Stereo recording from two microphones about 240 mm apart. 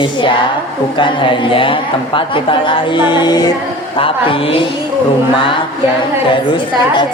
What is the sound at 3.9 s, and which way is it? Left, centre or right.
A woman's voice, left.